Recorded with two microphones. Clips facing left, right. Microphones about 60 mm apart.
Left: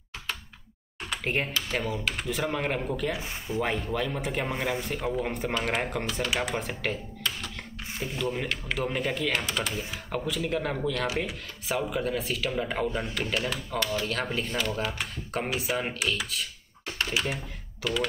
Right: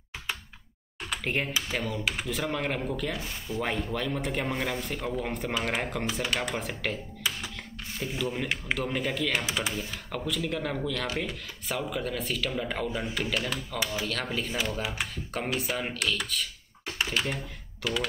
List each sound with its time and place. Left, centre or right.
1.1 s a man's voice: centre
3.2 s speech: centre
3.6 s a man's voice: centre
7.2 s a sound: centre
8.1 s a man's voice: centre
9.5 s speech: centre
9.8 s a man's voice: centre